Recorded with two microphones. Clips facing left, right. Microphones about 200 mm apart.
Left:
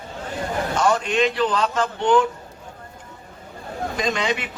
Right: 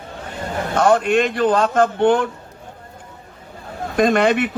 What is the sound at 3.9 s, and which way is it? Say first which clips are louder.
Speech: right 9 dB; 55° right (ahead or behind).